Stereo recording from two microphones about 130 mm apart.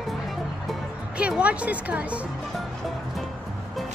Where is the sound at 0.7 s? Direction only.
10° right (ahead or behind).